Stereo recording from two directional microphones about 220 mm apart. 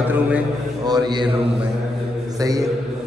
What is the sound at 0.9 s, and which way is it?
Speech, 20° right (ahead or behind).